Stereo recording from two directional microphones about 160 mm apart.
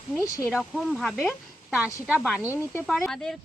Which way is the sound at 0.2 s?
20° left (ahead or behind).